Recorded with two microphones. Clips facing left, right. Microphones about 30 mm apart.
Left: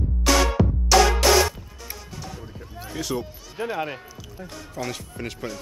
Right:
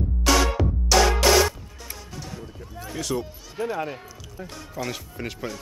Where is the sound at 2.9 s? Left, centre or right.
Centre.